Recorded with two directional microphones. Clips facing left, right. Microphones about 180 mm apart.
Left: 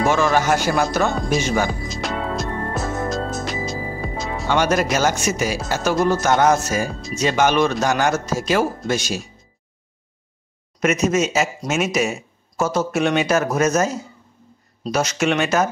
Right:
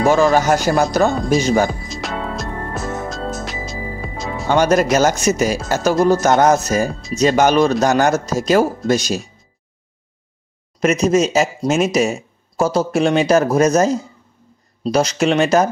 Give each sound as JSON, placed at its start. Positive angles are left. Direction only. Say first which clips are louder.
{"t": 0.0, "sound": "speech", "louder": "right 4 dB", "side_deg": -40}
{"t": 1.7, "sound": "music", "louder": "even", "side_deg": 0}
{"t": 4.5, "sound": "speech", "louder": "right 5 dB", "side_deg": -40}
{"t": 10.8, "sound": "speech", "louder": "right 4 dB", "side_deg": -35}